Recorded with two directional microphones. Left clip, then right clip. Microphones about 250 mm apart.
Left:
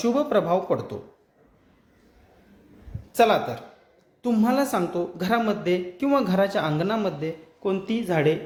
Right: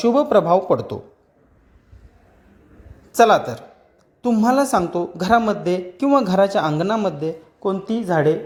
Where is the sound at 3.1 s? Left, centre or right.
Right.